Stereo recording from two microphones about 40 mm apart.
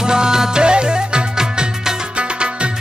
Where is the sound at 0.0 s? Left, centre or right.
Centre.